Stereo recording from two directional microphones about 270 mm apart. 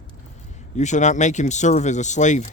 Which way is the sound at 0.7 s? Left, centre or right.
Left.